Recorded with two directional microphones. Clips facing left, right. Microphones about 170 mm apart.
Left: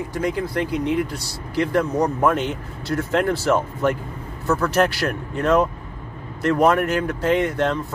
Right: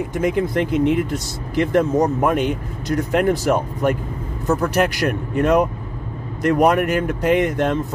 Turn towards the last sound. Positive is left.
turn(degrees=-15)  # may be behind; listen again after turning